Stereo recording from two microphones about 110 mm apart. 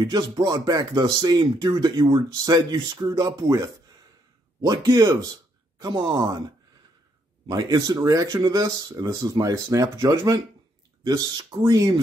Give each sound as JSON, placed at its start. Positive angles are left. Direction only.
{"t": 0.0, "sound": "speech", "side_deg": -35}
{"t": 7.4, "sound": "speech", "side_deg": -35}